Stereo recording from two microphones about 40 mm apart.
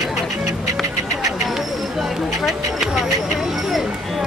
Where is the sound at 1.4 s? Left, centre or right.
Centre.